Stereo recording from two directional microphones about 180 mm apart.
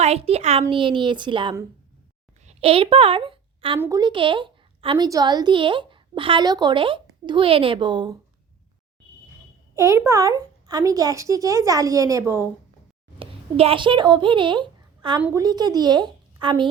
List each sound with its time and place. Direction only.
0.0 s a child's voice: 35° right (ahead or behind)
2.4 s a sound: 35° right (ahead or behind)
3.8 s a woman's voice: 20° right (ahead or behind)
9.7 s speech: 15° right (ahead or behind)
13.1 s a child's voice: 30° right (ahead or behind)